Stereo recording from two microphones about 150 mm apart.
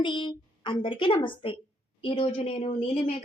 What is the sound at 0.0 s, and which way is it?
A woman's voice, 30° left (ahead or behind).